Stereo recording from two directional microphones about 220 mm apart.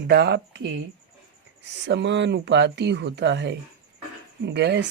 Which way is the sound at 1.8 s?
55° right (ahead or behind).